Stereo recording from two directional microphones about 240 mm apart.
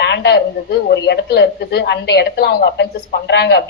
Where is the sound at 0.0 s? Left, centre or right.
Left.